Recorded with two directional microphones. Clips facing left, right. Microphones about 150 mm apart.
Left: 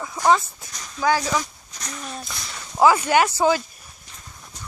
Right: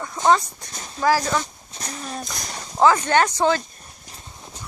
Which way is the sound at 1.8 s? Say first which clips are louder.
Right 2 dB; 35° right (ahead or behind).